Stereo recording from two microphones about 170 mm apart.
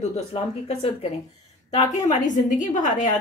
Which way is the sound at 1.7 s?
45° left (ahead or behind).